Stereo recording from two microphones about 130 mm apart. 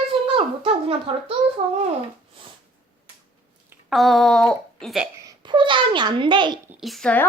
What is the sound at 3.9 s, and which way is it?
Speech, centre (ahead or behind).